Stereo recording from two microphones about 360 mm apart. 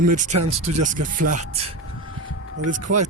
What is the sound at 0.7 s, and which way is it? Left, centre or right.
Speech, centre.